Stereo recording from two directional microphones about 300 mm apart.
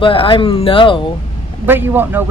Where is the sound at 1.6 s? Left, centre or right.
Centre.